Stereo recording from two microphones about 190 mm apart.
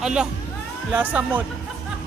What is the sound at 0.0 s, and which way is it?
Speech, 5° right (ahead or behind).